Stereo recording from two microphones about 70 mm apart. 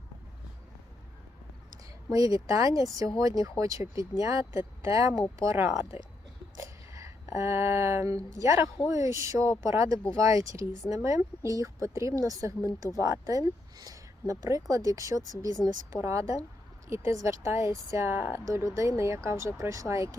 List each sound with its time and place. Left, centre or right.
2.1 s speech: right
5.4 s speech: right
6.6 s a sound: right
8.1 s speech: right